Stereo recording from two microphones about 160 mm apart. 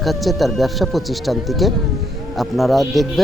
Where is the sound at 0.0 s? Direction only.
Centre (ahead or behind).